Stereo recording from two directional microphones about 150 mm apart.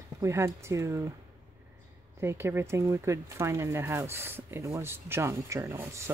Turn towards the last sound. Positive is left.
turn(degrees=-15)  # may be behind; listen again after turning